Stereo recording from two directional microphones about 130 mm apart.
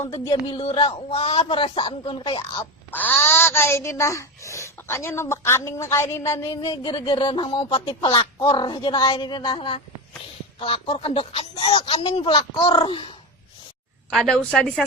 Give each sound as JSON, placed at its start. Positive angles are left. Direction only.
{"t": 0.3, "sound": "speech", "side_deg": 40}
{"t": 2.6, "sound": "speech", "side_deg": 15}
{"t": 6.8, "sound": "speech", "side_deg": 40}
{"t": 14.1, "sound": "a woman's voice", "side_deg": 5}